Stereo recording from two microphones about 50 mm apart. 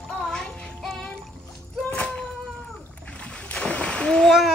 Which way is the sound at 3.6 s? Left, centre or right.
Left.